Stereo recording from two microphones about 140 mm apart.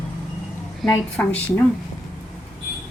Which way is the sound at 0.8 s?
5° left (ahead or behind).